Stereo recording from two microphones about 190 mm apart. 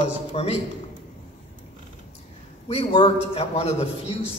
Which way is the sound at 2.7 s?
30° left (ahead or behind).